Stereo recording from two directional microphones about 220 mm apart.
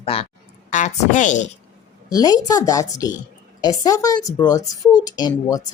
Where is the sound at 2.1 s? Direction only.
15° left (ahead or behind).